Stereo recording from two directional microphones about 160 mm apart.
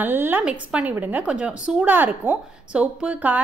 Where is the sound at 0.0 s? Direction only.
10° right (ahead or behind).